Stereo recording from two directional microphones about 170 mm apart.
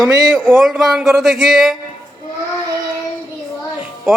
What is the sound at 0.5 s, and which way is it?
Speech, centre (ahead or behind).